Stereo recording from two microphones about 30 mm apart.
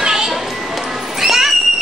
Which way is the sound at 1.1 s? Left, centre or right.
Centre.